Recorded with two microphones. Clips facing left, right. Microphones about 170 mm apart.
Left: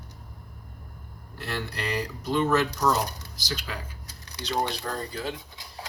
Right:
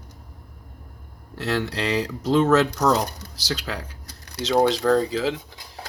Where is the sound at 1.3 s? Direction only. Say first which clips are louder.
Right 8 dB; 90° right.